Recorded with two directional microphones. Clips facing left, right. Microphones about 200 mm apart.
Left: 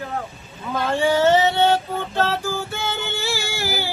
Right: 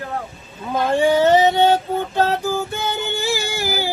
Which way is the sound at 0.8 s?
15° right (ahead or behind).